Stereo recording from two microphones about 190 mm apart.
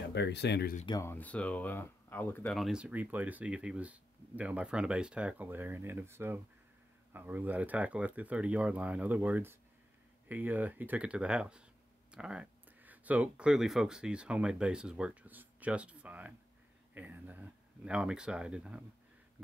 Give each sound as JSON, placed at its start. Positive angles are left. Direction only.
{"t": 0.1, "sound": "speech", "side_deg": 65}
{"t": 0.8, "sound": "speech", "side_deg": 15}